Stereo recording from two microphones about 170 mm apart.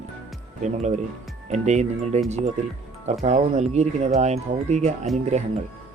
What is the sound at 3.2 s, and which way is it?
Speech, 40° right (ahead or behind).